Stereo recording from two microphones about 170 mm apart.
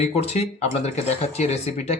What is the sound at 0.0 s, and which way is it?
Speech, 35° left (ahead or behind).